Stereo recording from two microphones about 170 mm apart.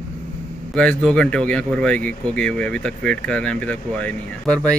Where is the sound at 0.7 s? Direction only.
5° left (ahead or behind).